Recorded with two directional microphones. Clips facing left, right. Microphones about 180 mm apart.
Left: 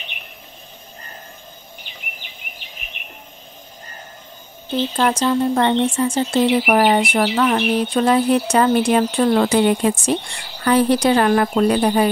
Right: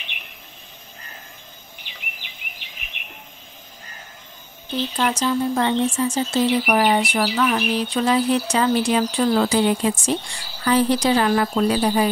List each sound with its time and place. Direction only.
1.9 s a sound: 40° left (ahead or behind)
5.0 s a woman's voice: 50° left (ahead or behind); by 6.7 s 75° left (ahead or behind)
6.7 s speech: 45° left (ahead or behind)
7.4 s speech: 30° left (ahead or behind)
7.7 s a woman's voice: 55° left (ahead or behind)